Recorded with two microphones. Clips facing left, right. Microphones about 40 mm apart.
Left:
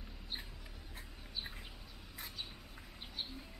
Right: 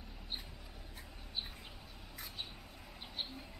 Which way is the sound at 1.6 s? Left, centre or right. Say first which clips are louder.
Even; centre.